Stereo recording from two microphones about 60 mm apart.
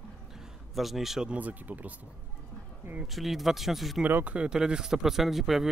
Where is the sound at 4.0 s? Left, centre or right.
Right.